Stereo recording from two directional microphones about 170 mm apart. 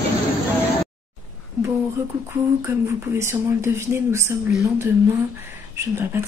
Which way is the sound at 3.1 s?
15° right (ahead or behind).